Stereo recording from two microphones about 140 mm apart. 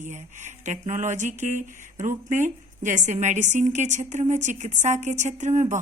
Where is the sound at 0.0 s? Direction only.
60° right (ahead or behind).